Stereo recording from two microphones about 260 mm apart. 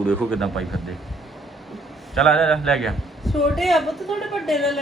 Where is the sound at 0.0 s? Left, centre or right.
Centre.